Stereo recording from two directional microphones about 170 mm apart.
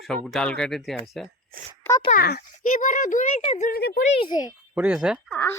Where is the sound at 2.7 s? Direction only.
50° left (ahead or behind).